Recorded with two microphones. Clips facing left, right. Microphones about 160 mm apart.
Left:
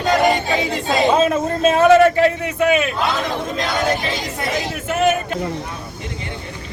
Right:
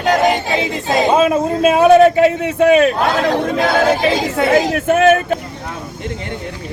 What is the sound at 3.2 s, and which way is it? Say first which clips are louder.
Speech: right 7 dB; 70° right (ahead or behind).